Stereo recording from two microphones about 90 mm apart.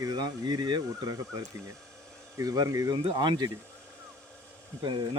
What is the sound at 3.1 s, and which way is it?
Speech, 55° right (ahead or behind).